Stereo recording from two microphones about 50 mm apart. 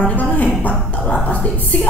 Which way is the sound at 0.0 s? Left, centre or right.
Left.